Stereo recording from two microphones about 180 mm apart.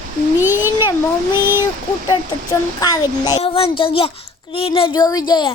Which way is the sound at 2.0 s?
20° left (ahead or behind).